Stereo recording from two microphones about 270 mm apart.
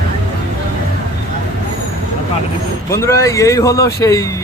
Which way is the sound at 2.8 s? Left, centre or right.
Centre.